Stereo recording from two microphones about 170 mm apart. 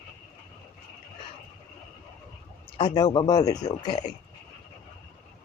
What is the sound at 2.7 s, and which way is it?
Speech, 25° left (ahead or behind).